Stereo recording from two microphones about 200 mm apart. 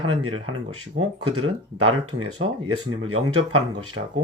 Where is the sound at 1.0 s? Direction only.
90° right.